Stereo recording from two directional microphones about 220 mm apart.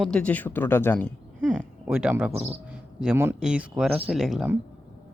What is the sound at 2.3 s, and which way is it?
Speech, 30° right (ahead or behind).